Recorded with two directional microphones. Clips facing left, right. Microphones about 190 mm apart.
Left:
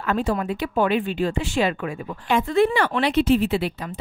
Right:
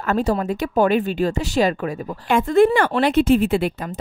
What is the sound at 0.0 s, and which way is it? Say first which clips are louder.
Speech: right 3 dB; 40° right (ahead or behind).